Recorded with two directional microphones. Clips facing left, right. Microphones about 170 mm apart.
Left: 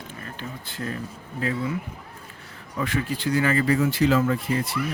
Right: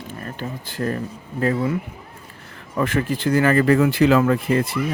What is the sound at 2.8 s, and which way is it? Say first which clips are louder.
Speech: right 5 dB; 50° right (ahead or behind).